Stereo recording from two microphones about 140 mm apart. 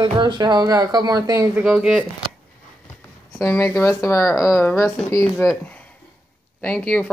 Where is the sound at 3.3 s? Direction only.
15° left (ahead or behind).